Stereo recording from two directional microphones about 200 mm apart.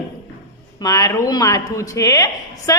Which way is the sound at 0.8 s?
20° left (ahead or behind).